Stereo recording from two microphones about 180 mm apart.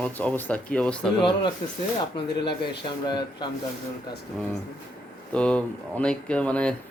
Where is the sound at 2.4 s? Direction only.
65° left (ahead or behind).